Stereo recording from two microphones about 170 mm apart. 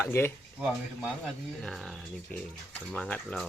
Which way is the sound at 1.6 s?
Centre (ahead or behind).